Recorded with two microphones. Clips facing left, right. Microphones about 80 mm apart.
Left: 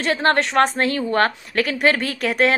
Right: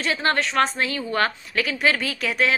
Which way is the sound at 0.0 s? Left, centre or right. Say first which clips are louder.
Left 4 dB; left.